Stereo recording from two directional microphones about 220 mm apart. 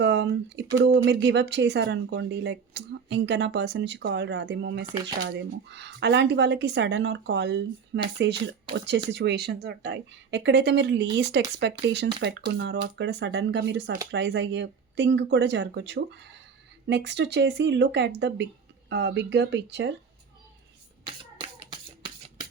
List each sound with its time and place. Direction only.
0.0 s a sound: 55° right (ahead or behind)
0.7 s speech: 15° right (ahead or behind)
1.0 s speech: 50° right (ahead or behind)
4.9 s speech: 20° right (ahead or behind)
5.2 s speech: 55° right (ahead or behind)
9.0 s speech: 50° right (ahead or behind)
21.0 s beatboxing: 20° right (ahead or behind)